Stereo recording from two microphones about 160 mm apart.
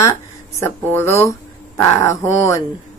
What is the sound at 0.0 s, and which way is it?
Speech, 15° left (ahead or behind).